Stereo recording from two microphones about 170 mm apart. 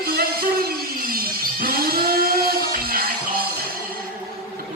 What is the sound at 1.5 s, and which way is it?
Music, 60° right (ahead or behind).